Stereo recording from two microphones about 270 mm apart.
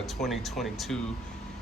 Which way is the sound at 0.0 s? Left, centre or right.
Centre.